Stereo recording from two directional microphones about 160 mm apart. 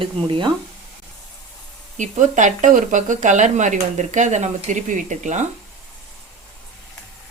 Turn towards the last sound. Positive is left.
turn(degrees=-50)  # may be behind; listen again after turning